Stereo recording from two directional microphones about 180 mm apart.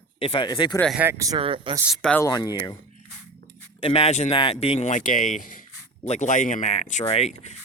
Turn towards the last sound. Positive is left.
turn(degrees=40)  # may be behind; listen again after turning